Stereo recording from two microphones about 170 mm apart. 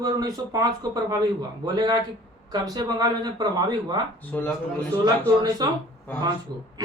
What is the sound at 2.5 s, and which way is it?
A man's voice, 25° right (ahead or behind).